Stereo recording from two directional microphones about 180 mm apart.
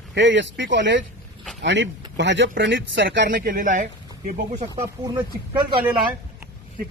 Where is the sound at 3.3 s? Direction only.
50° right (ahead or behind).